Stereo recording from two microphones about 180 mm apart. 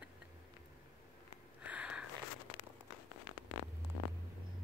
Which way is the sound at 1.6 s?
5° right (ahead or behind).